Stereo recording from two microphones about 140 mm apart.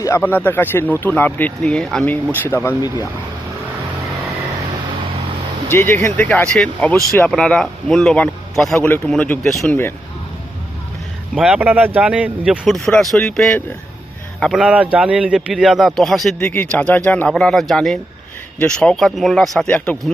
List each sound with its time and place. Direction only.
0.0 s speech: 20° left (ahead or behind)
5.7 s speech: 15° left (ahead or behind)
11.3 s speech: 5° right (ahead or behind)
16.4 s speech: 15° left (ahead or behind)